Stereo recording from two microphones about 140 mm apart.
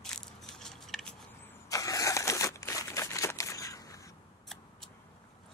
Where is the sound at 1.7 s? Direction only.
25° left (ahead or behind).